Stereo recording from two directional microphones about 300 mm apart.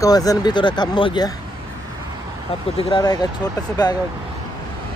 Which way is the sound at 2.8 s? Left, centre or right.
Centre.